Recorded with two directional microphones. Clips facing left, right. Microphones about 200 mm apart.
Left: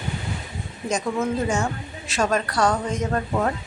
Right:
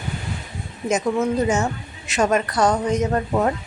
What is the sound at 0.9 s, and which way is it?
Speech, 20° right (ahead or behind).